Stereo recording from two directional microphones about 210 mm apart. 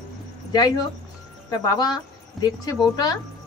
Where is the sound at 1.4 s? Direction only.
20° left (ahead or behind).